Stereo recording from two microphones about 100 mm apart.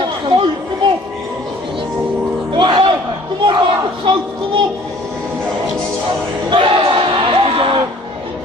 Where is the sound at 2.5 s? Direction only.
55° right (ahead or behind).